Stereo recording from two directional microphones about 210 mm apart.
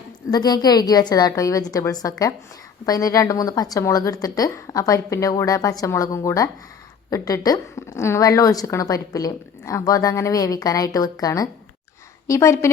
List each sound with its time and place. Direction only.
0.3 s a woman's voice: 20° left (ahead or behind)